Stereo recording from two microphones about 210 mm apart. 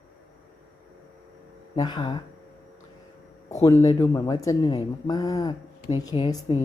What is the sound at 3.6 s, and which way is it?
Speech, 15° left (ahead or behind).